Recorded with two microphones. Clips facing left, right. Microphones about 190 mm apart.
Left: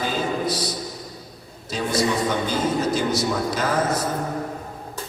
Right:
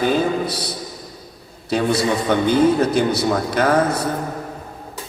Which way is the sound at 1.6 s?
60° right (ahead or behind).